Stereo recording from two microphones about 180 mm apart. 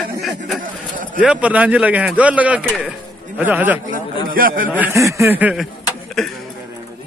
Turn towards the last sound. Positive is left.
turn(degrees=0)  # may be behind; listen again after turning